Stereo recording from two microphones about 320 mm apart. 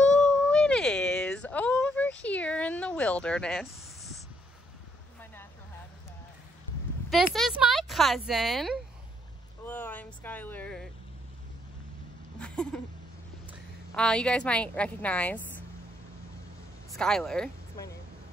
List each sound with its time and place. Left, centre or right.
0.1 s a sound: centre
5.2 s vehicle: centre
7.1 s speech: centre
9.7 s vehicle: centre
12.4 s a sound: centre
13.5 s a woman's voice: centre
16.9 s speech: centre